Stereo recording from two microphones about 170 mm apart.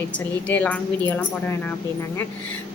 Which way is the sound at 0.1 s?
10° left (ahead or behind).